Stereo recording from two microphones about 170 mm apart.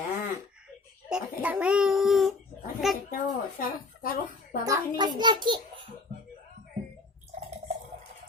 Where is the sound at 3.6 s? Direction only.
55° left (ahead or behind).